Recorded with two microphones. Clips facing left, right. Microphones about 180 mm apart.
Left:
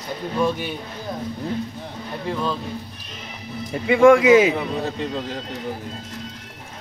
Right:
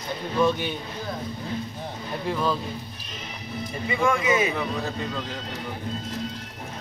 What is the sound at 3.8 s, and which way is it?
Speech, 85° left.